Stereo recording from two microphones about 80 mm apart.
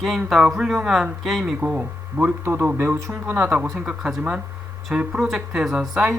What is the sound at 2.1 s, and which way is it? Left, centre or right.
Speech, right.